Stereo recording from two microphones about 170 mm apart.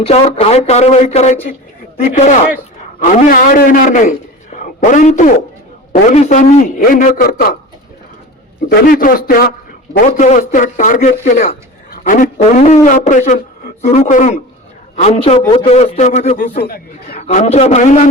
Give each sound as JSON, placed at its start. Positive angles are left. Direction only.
{"t": 0.0, "sound": "a man's voice", "side_deg": 35}
{"t": 3.0, "sound": "speech", "side_deg": 50}
{"t": 4.5, "sound": "a sound", "side_deg": 50}
{"t": 6.1, "sound": "speech", "side_deg": 45}
{"t": 8.7, "sound": "a man's voice", "side_deg": 55}
{"t": 10.2, "sound": "a man's voice", "side_deg": 45}
{"t": 16.6, "sound": "chatter", "side_deg": 65}
{"t": 17.2, "sound": "speech", "side_deg": 45}